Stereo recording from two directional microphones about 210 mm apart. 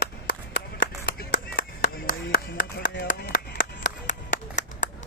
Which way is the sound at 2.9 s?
45° left (ahead or behind).